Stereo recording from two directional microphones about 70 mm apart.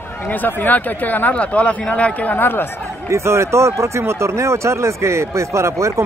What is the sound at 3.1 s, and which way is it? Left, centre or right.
Speech, right.